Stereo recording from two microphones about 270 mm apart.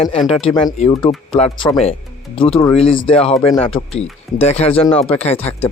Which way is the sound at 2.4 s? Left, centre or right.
Centre.